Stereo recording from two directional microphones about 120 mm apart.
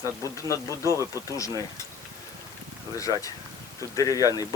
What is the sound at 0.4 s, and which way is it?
Cutlery, 25° left (ahead or behind).